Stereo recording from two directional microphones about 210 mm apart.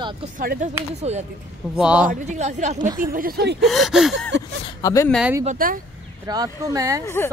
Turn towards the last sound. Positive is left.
turn(degrees=10)  # may be behind; listen again after turning